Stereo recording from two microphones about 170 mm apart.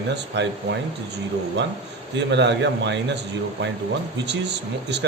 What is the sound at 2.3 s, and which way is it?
Speech, 90° right.